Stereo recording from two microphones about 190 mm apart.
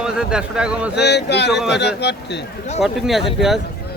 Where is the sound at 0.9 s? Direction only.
60° left (ahead or behind).